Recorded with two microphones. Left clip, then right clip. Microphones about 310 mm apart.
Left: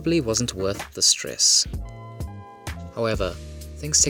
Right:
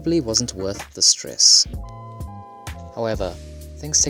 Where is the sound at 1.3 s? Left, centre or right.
Left.